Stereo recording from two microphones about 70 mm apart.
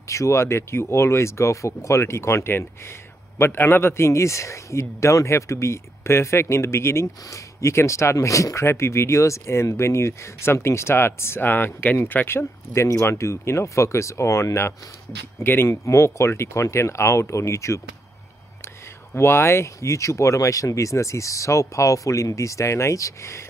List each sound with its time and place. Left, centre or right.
0.1 s speech: left
19.1 s speech: left